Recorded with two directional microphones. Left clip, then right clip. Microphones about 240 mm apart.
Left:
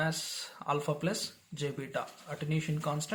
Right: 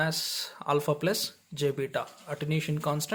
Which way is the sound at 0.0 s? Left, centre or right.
Right.